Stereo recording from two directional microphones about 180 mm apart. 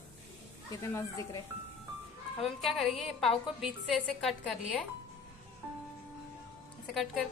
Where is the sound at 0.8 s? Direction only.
15° left (ahead or behind).